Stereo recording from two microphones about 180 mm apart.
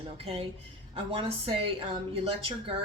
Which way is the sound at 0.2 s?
35° right (ahead or behind).